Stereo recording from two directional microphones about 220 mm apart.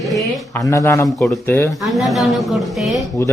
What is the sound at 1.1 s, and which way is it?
Speech, centre (ahead or behind).